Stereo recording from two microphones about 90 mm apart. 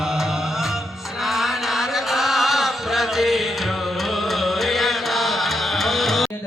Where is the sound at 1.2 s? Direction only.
Centre (ahead or behind).